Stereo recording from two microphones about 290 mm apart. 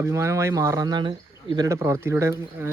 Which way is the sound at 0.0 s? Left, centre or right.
Centre.